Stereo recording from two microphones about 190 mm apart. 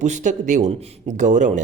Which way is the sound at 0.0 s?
40° right (ahead or behind).